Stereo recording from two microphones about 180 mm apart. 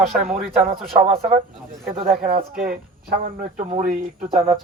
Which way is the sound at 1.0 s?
35° right (ahead or behind).